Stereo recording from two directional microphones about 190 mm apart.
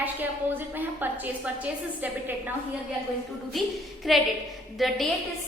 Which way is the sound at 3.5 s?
Centre (ahead or behind).